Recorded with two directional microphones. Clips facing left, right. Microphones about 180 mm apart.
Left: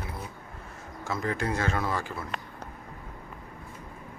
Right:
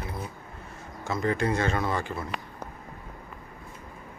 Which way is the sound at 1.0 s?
5° left (ahead or behind).